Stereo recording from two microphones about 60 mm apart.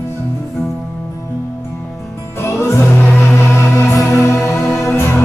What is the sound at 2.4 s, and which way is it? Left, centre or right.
Music, left.